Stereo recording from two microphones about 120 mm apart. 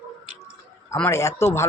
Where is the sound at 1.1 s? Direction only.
25° left (ahead or behind).